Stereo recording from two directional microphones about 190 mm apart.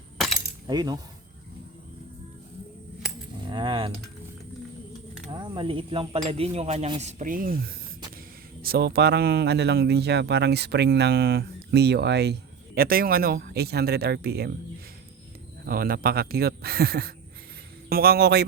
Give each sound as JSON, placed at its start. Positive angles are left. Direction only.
{"t": 0.7, "sound": "coin", "side_deg": -20}
{"t": 3.5, "sound": "coin", "side_deg": -25}
{"t": 5.3, "sound": "snake", "side_deg": -25}
{"t": 8.6, "sound": "a man's voice", "side_deg": -55}
{"t": 15.6, "sound": "speech", "side_deg": -50}